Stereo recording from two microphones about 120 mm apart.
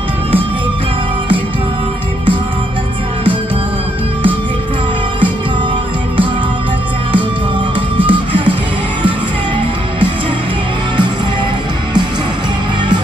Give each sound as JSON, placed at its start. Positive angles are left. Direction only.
{"t": 8.1, "sound": "music", "side_deg": -45}